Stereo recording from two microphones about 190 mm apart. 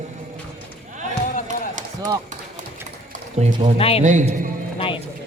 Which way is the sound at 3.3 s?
35° right (ahead or behind).